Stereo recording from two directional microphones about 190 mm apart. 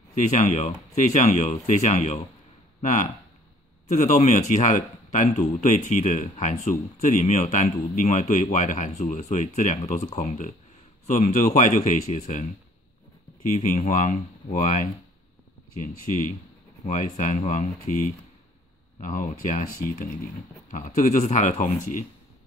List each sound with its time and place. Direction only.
0.1 s speech: 40° left (ahead or behind)
16.8 s speech: 40° left (ahead or behind)